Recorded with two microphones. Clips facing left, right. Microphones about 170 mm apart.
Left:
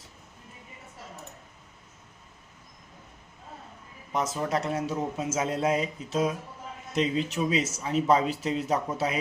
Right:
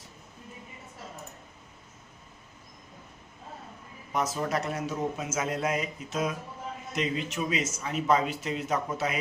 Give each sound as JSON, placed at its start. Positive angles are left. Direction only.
{"t": 4.1, "sound": "a man's voice", "side_deg": 25}